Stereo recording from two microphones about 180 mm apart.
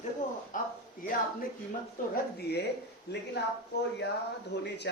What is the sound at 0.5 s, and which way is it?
Speech, 50° left (ahead or behind).